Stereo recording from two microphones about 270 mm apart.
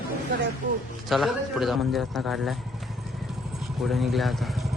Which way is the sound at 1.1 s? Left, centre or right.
Centre.